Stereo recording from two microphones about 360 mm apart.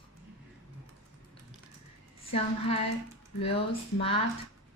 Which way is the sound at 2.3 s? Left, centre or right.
Centre.